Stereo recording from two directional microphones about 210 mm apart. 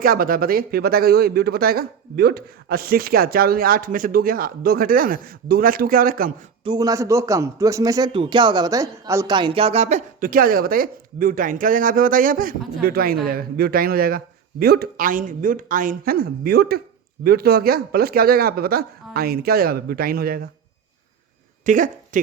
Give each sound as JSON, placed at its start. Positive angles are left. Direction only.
{"t": 0.0, "sound": "speech", "side_deg": -45}
{"t": 6.7, "sound": "speech", "side_deg": -15}
{"t": 21.7, "sound": "speech", "side_deg": -40}